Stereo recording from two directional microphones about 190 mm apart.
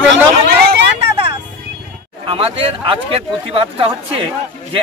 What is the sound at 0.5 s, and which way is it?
Vehicle, 60° right (ahead or behind).